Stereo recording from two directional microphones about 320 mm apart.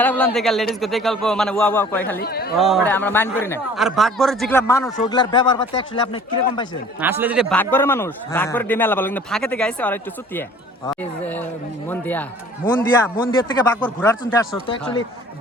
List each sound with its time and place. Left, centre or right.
0.0 s a man's voice: centre
2.1 s speech: left
2.6 s a man's voice: centre
7.0 s a man's voice: centre
13.2 s a man's voice: centre